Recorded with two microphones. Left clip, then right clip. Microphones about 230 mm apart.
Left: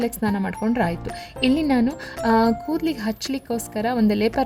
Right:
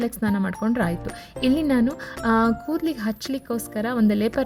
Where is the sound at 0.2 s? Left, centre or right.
Right.